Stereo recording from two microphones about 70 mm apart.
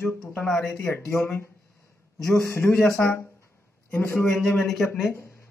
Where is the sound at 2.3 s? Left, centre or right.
Left.